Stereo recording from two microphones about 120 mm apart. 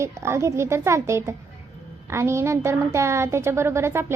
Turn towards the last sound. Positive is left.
turn(degrees=-20)  # may be behind; listen again after turning